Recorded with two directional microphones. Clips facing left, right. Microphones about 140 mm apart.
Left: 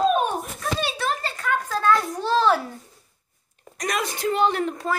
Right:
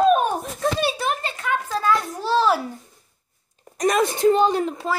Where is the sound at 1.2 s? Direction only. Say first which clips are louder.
Even; 10° right (ahead or behind).